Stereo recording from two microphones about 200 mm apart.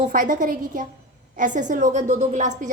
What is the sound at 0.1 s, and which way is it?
A woman's voice, 40° right (ahead or behind).